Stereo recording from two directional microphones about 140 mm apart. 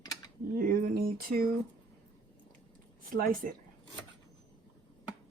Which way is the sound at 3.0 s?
80° right.